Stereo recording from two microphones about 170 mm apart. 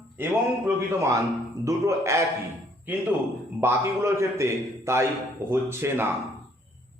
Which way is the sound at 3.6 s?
15° right (ahead or behind).